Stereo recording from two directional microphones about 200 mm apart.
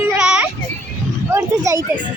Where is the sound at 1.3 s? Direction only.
15° right (ahead or behind).